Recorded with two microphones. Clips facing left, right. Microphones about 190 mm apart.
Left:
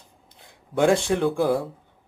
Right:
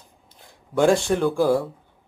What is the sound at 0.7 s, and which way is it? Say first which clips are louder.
Speech: right 1 dB; 20° left (ahead or behind).